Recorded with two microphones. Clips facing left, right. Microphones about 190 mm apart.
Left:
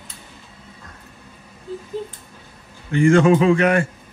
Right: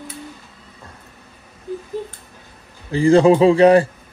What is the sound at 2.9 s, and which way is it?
Speech, 35° right (ahead or behind).